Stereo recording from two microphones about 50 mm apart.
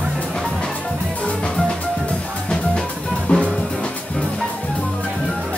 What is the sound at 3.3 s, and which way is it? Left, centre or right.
Music, left.